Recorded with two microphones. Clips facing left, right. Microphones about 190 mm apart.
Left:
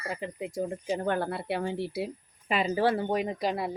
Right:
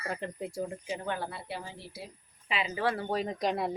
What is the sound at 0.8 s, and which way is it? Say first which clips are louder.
A woman's voice: left 6 dB; 45° left (ahead or behind).